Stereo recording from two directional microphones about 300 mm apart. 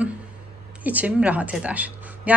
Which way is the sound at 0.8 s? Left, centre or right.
Centre.